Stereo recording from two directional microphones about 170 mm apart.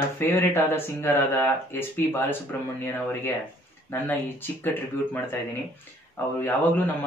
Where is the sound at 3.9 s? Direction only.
10° left (ahead or behind).